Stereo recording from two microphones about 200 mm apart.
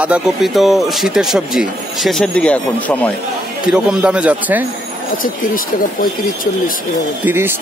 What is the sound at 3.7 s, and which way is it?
Speech, 5° right (ahead or behind).